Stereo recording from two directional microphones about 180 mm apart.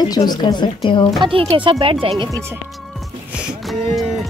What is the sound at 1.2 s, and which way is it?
Speech, 30° right (ahead or behind).